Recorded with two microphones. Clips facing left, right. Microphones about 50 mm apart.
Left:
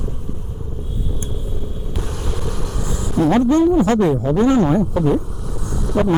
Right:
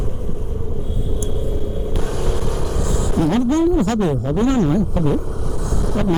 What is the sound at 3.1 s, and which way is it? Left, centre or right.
Speech, left.